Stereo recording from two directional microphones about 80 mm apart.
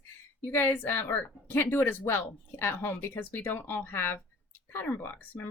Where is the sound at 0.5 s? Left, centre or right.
Left.